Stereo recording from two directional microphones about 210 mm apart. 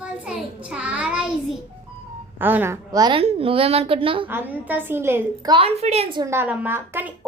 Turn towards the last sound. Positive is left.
turn(degrees=-10)  # may be behind; listen again after turning